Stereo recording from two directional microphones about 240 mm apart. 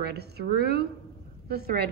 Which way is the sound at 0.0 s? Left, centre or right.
Right.